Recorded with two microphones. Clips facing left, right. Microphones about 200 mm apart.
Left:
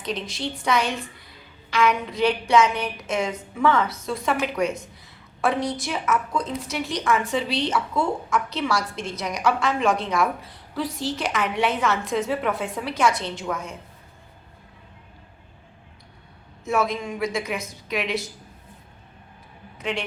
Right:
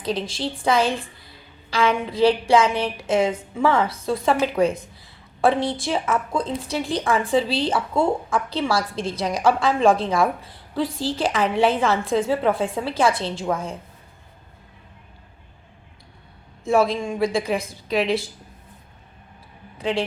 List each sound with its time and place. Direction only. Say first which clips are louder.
0.0 s a woman's voice: right 4 dB; 30° right (ahead or behind)
16.6 s a woman's voice: right 5 dB; 30° right (ahead or behind)
19.8 s a woman's voice: right 5 dB; 30° right (ahead or behind)